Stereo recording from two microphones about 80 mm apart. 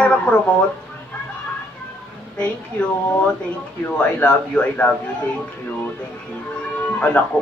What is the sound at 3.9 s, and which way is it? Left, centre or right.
Speech, centre.